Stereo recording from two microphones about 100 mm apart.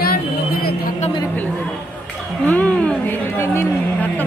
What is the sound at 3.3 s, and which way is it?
Chatter, 25° left (ahead or behind).